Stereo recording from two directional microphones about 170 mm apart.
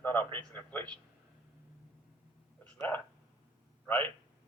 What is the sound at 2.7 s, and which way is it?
A man's voice, 10° left (ahead or behind).